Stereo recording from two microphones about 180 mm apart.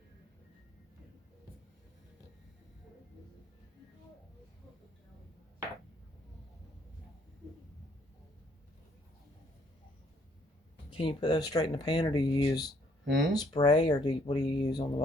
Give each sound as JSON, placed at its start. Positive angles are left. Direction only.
{"t": 10.9, "sound": "speech", "side_deg": 30}
{"t": 13.1, "sound": "speech", "side_deg": -80}
{"t": 13.3, "sound": "speech", "side_deg": 20}